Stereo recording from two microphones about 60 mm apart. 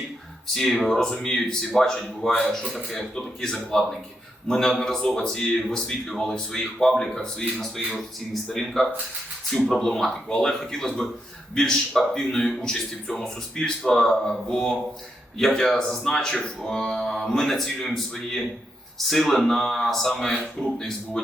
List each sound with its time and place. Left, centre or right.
0.4 s a man's voice: centre